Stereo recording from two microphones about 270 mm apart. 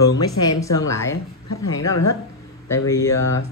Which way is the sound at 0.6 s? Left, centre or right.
Centre.